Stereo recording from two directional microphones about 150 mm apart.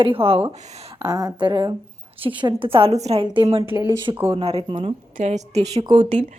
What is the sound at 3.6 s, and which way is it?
Speech, 15° right (ahead or behind).